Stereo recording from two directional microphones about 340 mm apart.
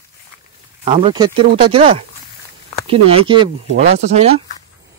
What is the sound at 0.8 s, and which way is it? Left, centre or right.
Speech, centre.